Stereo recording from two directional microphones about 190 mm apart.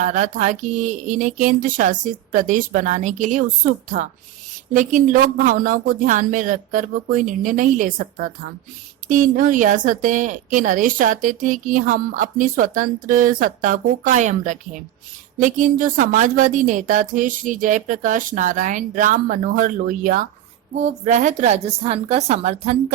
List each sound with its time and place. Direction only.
0.0 s a woman's voice: 40° right (ahead or behind)